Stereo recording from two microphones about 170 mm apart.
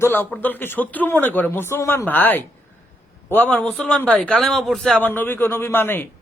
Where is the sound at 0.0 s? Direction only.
10° left (ahead or behind).